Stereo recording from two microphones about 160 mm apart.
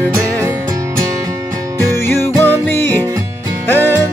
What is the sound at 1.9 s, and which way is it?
Music, 15° left (ahead or behind).